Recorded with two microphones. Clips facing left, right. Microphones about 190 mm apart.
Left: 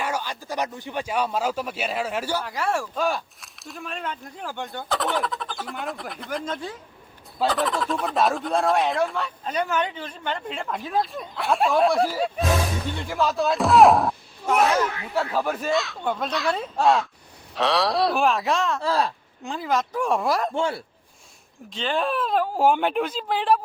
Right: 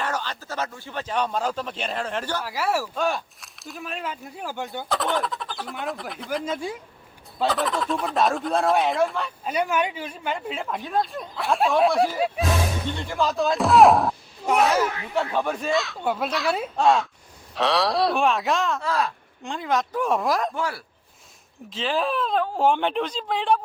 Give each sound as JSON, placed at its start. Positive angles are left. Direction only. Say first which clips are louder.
{"t": 0.0, "sound": "speech", "louder": "left 1 dB", "side_deg": 10}
{"t": 2.4, "sound": "speech", "louder": "right 1 dB", "side_deg": -5}
{"t": 14.8, "sound": "speech", "louder": "right 1 dB", "side_deg": -20}
{"t": 15.4, "sound": "speech", "louder": "left 1 dB", "side_deg": 5}
{"t": 18.8, "sound": "speech", "louder": "left 2 dB", "side_deg": 30}
{"t": 19.4, "sound": "speech", "louder": "even", "side_deg": 0}
{"t": 20.5, "sound": "a man's voice", "louder": "left 3 dB", "side_deg": 25}
{"t": 21.7, "sound": "speech", "louder": "even", "side_deg": 0}